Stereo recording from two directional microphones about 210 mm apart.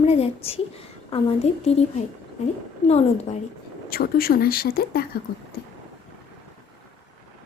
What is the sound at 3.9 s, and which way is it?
Speech, 45° left (ahead or behind).